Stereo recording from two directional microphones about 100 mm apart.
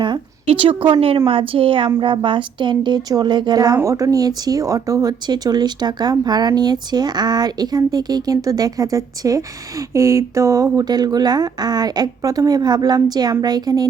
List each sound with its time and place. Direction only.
0.4 s a woman's voice: 65° right (ahead or behind); by 13.8 s 40° right (ahead or behind)